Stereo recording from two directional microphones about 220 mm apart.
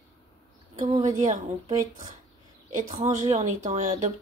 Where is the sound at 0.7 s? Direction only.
30° right (ahead or behind).